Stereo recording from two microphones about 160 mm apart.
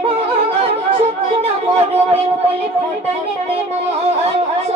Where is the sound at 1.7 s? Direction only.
40° right (ahead or behind).